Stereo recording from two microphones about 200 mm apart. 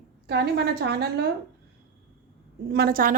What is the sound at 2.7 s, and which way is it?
Speech, 50° right (ahead or behind).